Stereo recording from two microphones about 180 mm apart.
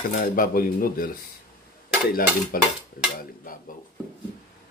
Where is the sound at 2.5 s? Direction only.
50° left (ahead or behind).